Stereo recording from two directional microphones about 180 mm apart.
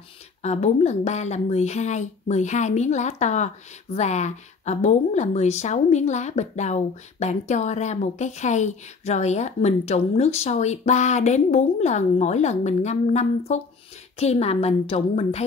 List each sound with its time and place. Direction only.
0.4 s speech: 40° left (ahead or behind)